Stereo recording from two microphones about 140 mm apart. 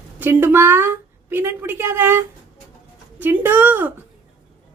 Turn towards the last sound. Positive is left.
turn(degrees=-15)  # may be behind; listen again after turning